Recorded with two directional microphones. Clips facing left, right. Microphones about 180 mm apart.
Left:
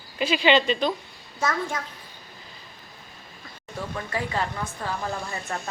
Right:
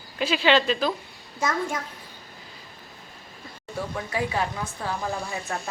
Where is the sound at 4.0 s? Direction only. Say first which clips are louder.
Right 1 dB; 5° right (ahead or behind).